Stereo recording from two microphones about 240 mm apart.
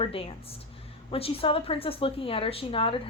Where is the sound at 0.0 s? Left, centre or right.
Left.